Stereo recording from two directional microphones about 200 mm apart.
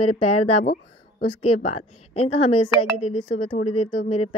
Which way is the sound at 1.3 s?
30° left (ahead or behind).